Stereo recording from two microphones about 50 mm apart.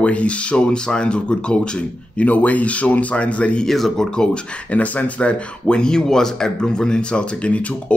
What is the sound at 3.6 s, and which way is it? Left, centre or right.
Speech, centre.